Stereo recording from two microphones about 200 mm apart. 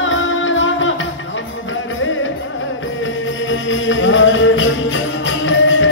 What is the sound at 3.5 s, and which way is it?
Music, 75° left (ahead or behind).